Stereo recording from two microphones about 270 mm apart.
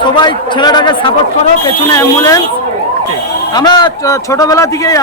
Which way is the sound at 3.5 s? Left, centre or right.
Centre.